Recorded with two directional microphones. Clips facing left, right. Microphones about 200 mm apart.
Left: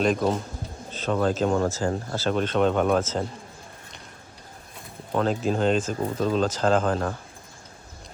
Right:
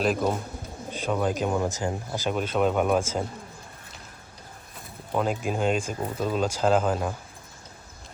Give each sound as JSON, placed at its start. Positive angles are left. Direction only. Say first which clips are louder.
{"t": 0.0, "sound": "speech", "louder": "left 2 dB", "side_deg": -5}
{"t": 5.1, "sound": "speech", "louder": "left 3 dB", "side_deg": -10}